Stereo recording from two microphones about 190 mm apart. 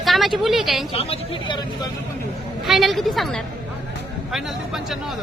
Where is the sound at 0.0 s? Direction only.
Centre (ahead or behind).